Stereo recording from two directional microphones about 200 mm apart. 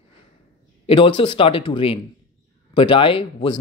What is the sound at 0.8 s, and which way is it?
Speech, 25° left (ahead or behind).